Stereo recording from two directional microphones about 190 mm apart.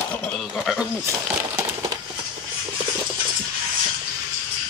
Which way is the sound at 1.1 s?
15° right (ahead or behind).